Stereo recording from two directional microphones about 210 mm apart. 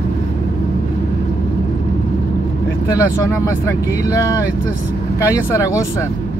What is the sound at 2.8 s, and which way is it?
Speech, 15° left (ahead or behind).